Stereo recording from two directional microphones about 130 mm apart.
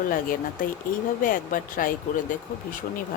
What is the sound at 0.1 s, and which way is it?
Speech, 90° left.